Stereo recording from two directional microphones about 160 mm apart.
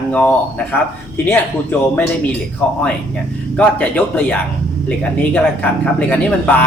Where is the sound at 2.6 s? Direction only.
10° left (ahead or behind).